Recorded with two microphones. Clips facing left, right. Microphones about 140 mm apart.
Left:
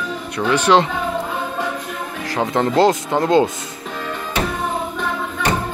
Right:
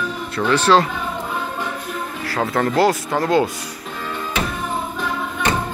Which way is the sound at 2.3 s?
20° left (ahead or behind).